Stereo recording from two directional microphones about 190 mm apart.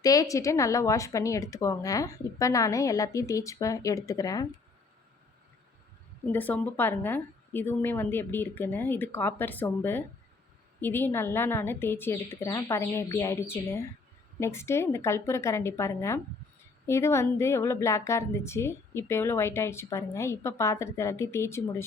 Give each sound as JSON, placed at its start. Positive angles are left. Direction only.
{"t": 0.0, "sound": "a woman's voice", "side_deg": 20}
{"t": 6.3, "sound": "a woman's voice", "side_deg": 10}